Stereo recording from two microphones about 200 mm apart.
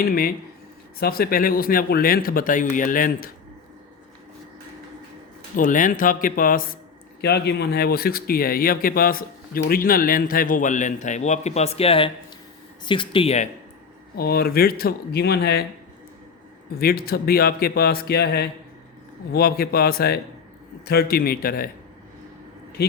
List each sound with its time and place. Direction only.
0.0 s speech: 50° left (ahead or behind)
5.5 s speech: 40° left (ahead or behind)
7.2 s speech: 55° left (ahead or behind); by 13.5 s 30° left (ahead or behind)
14.2 s speech: 50° left (ahead or behind)
16.7 s speech: 50° left (ahead or behind)